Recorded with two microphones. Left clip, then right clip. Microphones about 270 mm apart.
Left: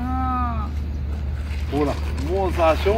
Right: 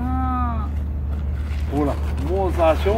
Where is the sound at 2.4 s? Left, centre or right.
Centre.